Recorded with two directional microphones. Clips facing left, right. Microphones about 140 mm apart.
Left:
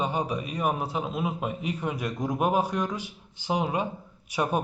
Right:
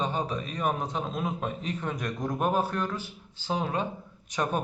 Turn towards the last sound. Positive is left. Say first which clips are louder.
# left 2 dB
turn(degrees=10)  # may be behind; listen again after turning